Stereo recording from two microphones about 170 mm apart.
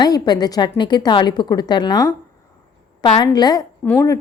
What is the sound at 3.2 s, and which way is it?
A woman's voice, 20° left (ahead or behind).